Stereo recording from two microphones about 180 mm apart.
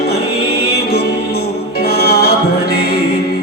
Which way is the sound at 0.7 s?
60° left (ahead or behind).